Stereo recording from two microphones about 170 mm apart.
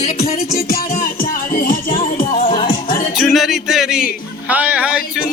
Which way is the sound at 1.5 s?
55° left (ahead or behind).